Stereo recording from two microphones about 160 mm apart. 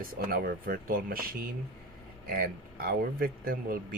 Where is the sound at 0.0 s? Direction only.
65° right (ahead or behind).